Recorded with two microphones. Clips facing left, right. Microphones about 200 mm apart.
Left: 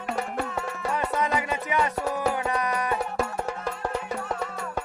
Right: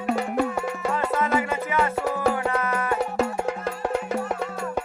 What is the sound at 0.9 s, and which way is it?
Music, 15° left (ahead or behind).